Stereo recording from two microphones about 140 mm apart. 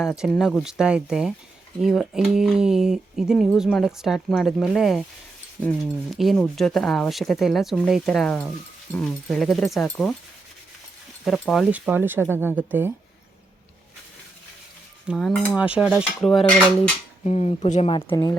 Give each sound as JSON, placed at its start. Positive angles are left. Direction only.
{"t": 0.3, "sound": "speech", "side_deg": 0}
{"t": 11.3, "sound": "speech", "side_deg": 0}
{"t": 11.7, "sound": "speech", "side_deg": -10}
{"t": 15.0, "sound": "speech", "side_deg": -5}
{"t": 17.2, "sound": "speech", "side_deg": 50}